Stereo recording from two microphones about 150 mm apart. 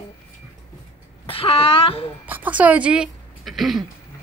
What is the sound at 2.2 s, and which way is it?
Speech, 10° right (ahead or behind).